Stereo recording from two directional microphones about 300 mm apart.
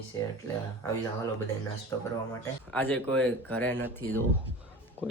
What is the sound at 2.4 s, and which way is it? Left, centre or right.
Speech, centre.